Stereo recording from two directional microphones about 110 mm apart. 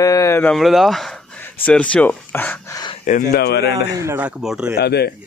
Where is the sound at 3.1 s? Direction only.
90° left.